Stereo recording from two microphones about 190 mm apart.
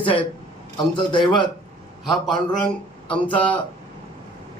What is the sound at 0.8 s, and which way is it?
Speech, 25° left (ahead or behind).